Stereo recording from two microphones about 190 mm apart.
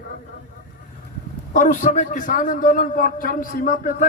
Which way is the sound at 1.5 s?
40° left (ahead or behind).